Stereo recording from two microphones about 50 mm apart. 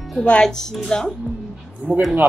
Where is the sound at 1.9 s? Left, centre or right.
Right.